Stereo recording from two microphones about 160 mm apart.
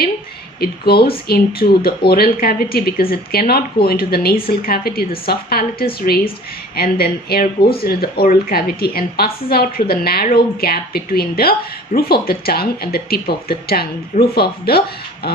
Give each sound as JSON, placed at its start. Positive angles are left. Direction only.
{"t": 0.6, "sound": "a woman's voice", "side_deg": 75}